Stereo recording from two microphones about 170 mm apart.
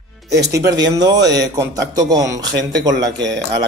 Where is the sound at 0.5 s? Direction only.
20° right (ahead or behind).